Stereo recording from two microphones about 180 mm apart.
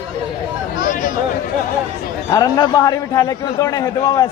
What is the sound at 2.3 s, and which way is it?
A man's voice, 20° left (ahead or behind).